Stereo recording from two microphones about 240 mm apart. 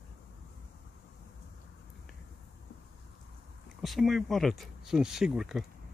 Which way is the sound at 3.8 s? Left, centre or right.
Centre.